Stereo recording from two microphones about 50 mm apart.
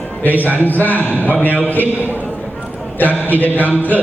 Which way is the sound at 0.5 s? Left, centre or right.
Left.